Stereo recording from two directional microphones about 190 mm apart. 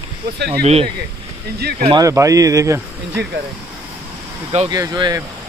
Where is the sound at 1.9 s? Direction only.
15° right (ahead or behind).